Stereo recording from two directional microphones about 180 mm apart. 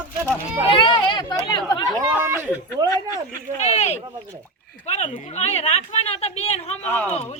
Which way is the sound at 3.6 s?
35° left (ahead or behind).